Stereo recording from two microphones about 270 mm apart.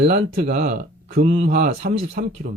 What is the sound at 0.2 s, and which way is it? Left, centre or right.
Speech, right.